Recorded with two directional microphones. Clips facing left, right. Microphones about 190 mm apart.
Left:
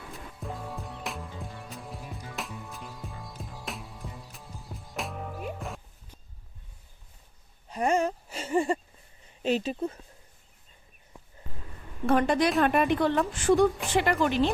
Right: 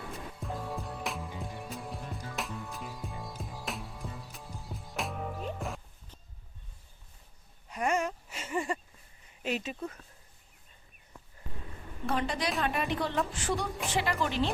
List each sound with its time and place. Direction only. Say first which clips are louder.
0.1 s music: left 3 dB; centre (ahead or behind)
1.3 s music: right 1 dB; 15° right (ahead or behind)
1.7 s music: right 1 dB; centre (ahead or behind)
7.7 s a sound: left 5 dB; 30° left (ahead or behind)
9.4 s speech: left 7 dB; 30° left (ahead or behind)
12.0 s a woman's voice: left 8 dB; 55° left (ahead or behind)